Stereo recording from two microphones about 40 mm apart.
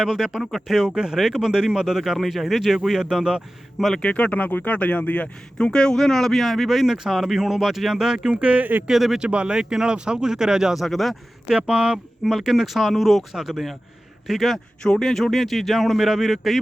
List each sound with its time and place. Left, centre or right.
0.0 s speech: centre
0.9 s speech: centre
4.1 s speech: left
5.5 s speech: left; by 8.4 s centre
8.4 s speech: right
8.9 s speech: centre
9.1 s speech: right
10.8 s speech: centre
11.5 s speech: right
12.2 s speech: centre
14.8 s speech: centre